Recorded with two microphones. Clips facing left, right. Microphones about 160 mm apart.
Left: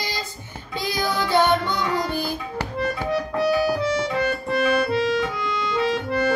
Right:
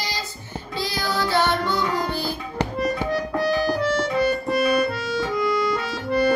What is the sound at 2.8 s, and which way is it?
Music, centre (ahead or behind).